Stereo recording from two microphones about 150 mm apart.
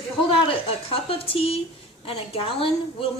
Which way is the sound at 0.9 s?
40° left (ahead or behind).